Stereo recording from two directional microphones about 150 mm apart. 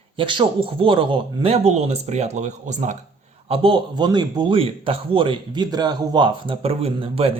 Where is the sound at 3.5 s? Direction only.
35° right (ahead or behind).